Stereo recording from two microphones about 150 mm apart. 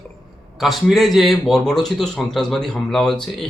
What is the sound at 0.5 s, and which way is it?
A man's voice, centre (ahead or behind).